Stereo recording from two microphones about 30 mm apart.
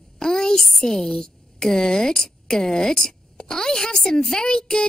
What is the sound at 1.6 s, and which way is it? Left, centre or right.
A woman's voice, left.